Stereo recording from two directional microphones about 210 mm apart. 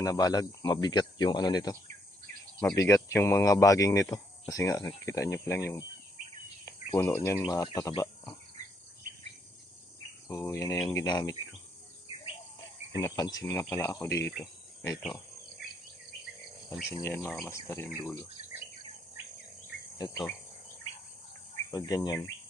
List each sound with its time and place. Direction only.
0.0 s speech: 15° left (ahead or behind)
2.7 s cricket: 15° left (ahead or behind)
4.1 s speech: 15° left (ahead or behind)
5.0 s cricket: 15° left (ahead or behind)
6.7 s speech: 15° left (ahead or behind)
7.5 s cricket: 15° left (ahead or behind)
10.2 s cricket: 10° left (ahead or behind)
12.9 s cricket: 15° left (ahead or behind)
17.0 s cricket: 15° left (ahead or behind)
21.5 s cricket: 15° left (ahead or behind)